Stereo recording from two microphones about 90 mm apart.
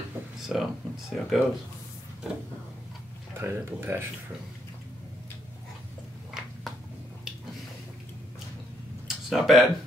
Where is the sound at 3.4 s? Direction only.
25° right (ahead or behind).